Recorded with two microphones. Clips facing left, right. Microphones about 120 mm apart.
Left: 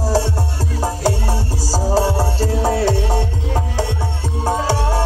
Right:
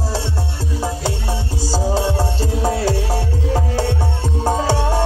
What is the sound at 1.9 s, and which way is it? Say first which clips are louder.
Music: left 2 dB; 35° left (ahead or behind).